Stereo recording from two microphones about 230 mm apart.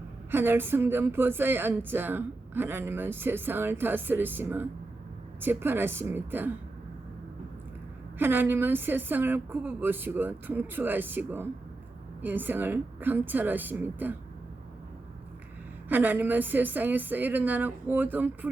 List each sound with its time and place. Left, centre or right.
0.3 s a woman's voice: centre
8.2 s a woman's voice: centre
15.9 s a woman's voice: centre